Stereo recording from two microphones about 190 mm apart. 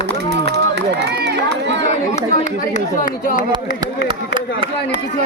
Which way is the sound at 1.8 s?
40° left (ahead or behind).